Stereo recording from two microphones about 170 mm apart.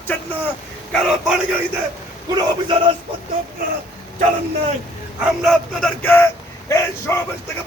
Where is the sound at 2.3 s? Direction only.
25° right (ahead or behind).